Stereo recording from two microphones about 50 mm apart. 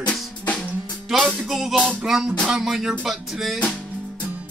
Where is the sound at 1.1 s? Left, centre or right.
Centre.